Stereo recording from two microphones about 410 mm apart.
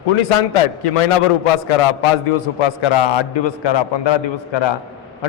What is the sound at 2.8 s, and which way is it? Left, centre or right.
A man's voice, left.